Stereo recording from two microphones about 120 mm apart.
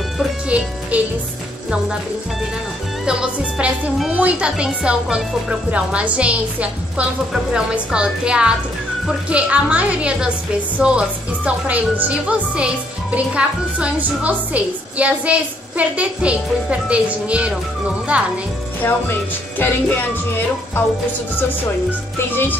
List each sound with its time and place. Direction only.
0.5 s speech: 10° right (ahead or behind)
3.1 s speech: 5° right (ahead or behind)
18.8 s music: 15° left (ahead or behind)
22.3 s music: 15° left (ahead or behind)